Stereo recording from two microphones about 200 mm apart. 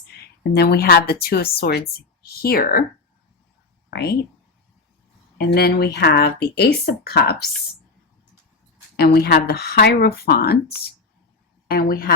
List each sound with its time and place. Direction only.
0.5 s speech: 50° left (ahead or behind)
3.8 s speech: 50° left (ahead or behind)
5.4 s speech: 50° left (ahead or behind)
9.0 s speech: 50° left (ahead or behind)